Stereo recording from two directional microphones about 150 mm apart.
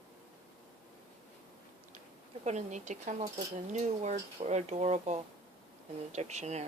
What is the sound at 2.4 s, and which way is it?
Speech, 50° right (ahead or behind).